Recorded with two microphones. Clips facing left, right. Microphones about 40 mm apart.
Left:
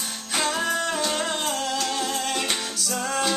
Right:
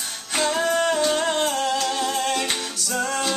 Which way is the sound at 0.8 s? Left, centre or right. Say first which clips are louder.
Right 5 dB; centre.